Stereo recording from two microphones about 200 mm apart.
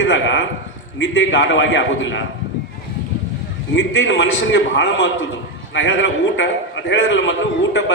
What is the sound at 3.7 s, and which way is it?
A man's voice, 65° left (ahead or behind).